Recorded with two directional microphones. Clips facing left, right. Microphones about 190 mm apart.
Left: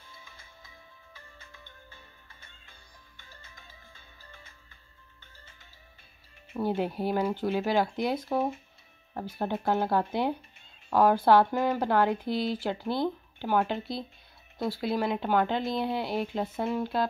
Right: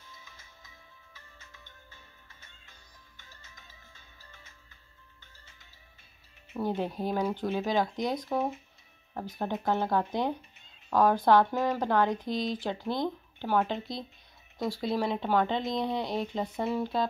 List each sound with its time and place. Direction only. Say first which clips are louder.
0.1 s music: left 3 dB; 30° left (ahead or behind)
1.5 s music: left 3 dB; 50° left (ahead or behind)
3.2 s music: left 3 dB; 55° left (ahead or behind)
5.2 s music: left 6 dB; 50° left (ahead or behind)
6.5 s speech: left 2 dB; 10° left (ahead or behind)